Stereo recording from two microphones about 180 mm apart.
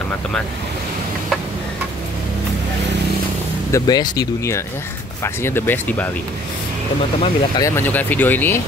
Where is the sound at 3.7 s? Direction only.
20° left (ahead or behind).